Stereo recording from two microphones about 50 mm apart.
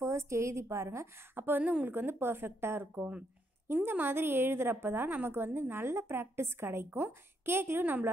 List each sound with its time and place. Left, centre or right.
0.0 s a woman's voice: right
1.3 s a woman's voice: right
1.6 s a woman's voice: right